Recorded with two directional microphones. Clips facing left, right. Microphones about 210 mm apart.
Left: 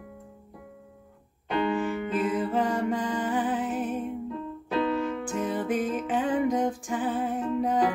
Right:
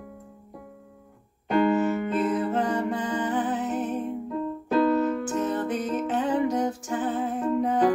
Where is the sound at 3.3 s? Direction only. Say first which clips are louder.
Right 1 dB; 10° left (ahead or behind).